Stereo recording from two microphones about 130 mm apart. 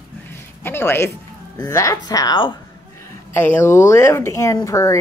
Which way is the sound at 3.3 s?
15° left (ahead or behind).